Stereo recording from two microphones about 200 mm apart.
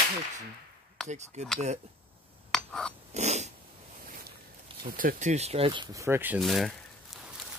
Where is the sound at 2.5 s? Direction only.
5° left (ahead or behind).